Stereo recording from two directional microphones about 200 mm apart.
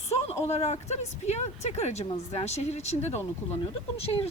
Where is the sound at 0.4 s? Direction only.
30° left (ahead or behind).